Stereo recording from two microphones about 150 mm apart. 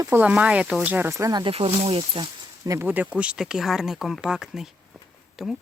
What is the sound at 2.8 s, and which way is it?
Speech, 10° right (ahead or behind).